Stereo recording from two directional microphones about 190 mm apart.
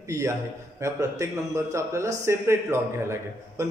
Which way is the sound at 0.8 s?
15° right (ahead or behind).